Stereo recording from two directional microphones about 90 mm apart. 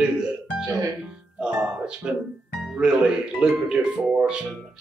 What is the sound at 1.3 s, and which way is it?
Speech, 10° right (ahead or behind).